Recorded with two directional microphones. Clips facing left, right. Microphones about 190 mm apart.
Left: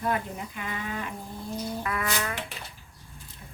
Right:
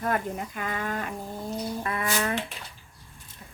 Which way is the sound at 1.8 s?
30° right (ahead or behind).